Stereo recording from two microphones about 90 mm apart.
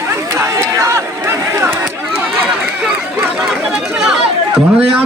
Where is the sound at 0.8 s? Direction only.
35° right (ahead or behind).